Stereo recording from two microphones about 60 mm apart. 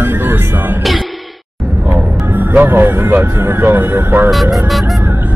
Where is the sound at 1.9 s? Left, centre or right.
Right.